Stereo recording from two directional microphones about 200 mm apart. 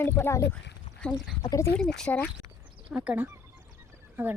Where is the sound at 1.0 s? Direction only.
5° right (ahead or behind).